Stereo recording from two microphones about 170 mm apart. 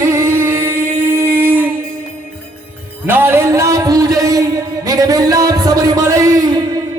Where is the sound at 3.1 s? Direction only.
15° right (ahead or behind).